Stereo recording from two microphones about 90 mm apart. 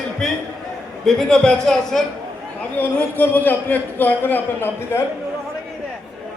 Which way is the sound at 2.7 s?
20° left (ahead or behind).